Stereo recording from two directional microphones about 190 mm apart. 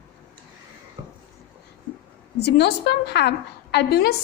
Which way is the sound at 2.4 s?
60° left (ahead or behind).